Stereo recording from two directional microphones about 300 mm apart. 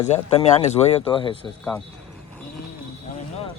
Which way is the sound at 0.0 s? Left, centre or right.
Centre.